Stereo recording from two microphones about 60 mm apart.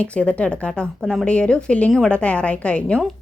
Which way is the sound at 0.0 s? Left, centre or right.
Left.